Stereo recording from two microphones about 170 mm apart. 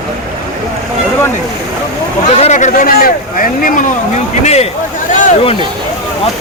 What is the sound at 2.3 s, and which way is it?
Speech, 40° left (ahead or behind).